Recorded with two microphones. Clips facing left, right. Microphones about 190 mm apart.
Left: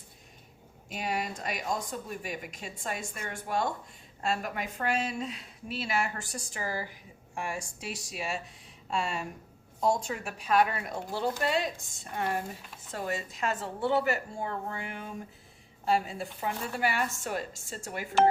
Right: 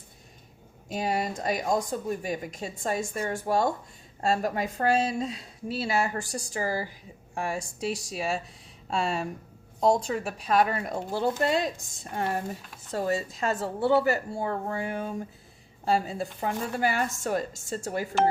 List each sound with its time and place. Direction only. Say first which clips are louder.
0.9 s speech: right 5 dB; 40° right (ahead or behind)
12.9 s speech: right 7 dB; 35° right (ahead or behind)